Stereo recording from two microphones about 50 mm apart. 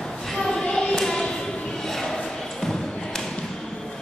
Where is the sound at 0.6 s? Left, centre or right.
Centre.